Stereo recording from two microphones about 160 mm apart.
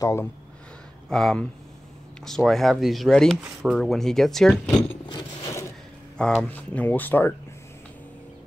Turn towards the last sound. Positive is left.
turn(degrees=10)  # may be behind; listen again after turning